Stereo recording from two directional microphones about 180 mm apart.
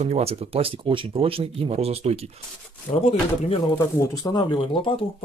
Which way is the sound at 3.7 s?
15° left (ahead or behind).